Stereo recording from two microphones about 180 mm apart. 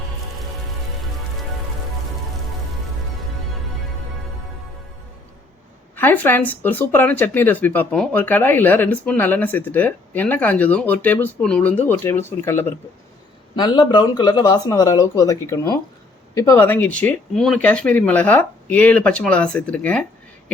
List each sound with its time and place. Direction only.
6.0 s speech: 10° left (ahead or behind)
13.6 s speech: 25° left (ahead or behind); by 20.1 s 10° left (ahead or behind)